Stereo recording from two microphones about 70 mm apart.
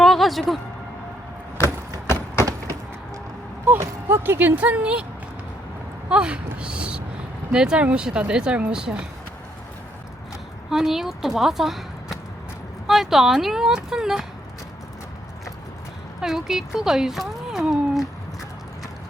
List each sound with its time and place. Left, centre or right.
0.0 s music: centre
2.4 s a sound: right
4.1 s speech: right
6.1 s speech: centre
10.7 s a woman's voice: centre
16.2 s speech: centre